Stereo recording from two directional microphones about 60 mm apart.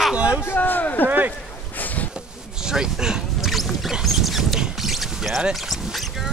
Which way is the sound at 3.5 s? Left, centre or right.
Centre.